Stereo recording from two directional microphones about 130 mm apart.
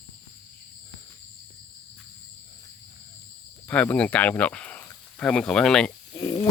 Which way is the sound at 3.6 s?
10° left (ahead or behind).